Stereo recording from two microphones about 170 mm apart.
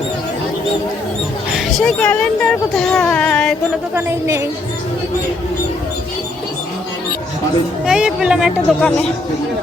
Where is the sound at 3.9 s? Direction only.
15° right (ahead or behind).